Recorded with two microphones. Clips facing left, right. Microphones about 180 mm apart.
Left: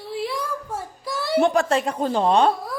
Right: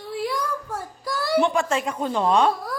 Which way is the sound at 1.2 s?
25° left (ahead or behind).